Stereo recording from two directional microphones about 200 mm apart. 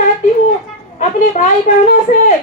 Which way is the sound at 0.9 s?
35° left (ahead or behind).